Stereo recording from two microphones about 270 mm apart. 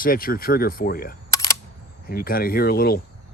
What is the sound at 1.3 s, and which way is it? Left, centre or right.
Single-lens reflex camera, centre.